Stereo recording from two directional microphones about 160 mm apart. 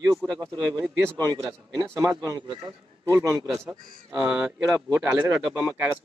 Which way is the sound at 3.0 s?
20° right (ahead or behind).